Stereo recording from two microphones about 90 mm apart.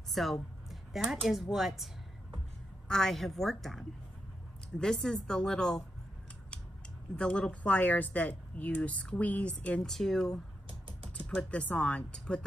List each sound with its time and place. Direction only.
0.1 s speech: centre (ahead or behind)
2.9 s a woman's voice: 5° left (ahead or behind)
7.2 s speech: 10° left (ahead or behind)
10.7 s typing: 80° right
11.1 s speech: 10° left (ahead or behind)